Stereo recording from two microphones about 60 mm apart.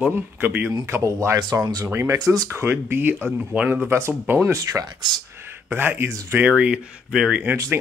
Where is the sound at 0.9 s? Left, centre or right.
Right.